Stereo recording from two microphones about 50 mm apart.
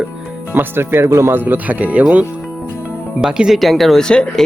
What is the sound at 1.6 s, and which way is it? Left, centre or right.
Speech, right.